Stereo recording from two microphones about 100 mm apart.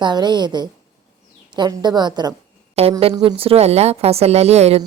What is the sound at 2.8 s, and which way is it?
A woman's voice, 90° right.